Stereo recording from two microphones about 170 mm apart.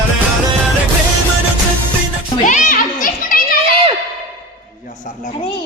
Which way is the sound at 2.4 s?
50° left (ahead or behind).